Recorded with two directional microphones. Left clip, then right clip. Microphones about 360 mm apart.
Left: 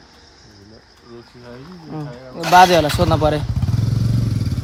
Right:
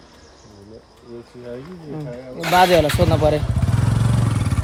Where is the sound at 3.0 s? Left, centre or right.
Left.